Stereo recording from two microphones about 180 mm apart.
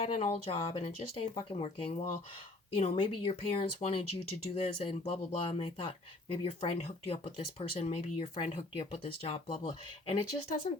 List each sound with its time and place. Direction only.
0.0 s speech: 30° left (ahead or behind)